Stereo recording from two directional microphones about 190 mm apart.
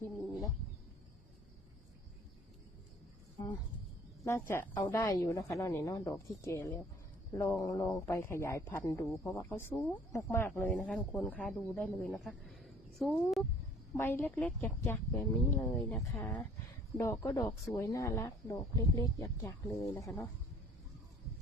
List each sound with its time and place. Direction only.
0.0 s wild animals: 20° left (ahead or behind)
4.2 s a man's voice: 10° left (ahead or behind)
13.9 s a man's voice: 15° left (ahead or behind)